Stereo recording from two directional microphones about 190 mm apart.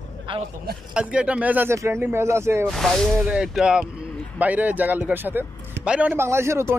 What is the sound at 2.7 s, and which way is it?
Speech, centre (ahead or behind).